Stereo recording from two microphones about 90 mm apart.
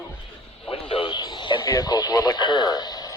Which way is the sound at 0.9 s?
65° left (ahead or behind).